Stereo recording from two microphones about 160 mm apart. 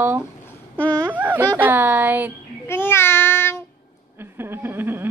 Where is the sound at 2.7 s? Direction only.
15° left (ahead or behind).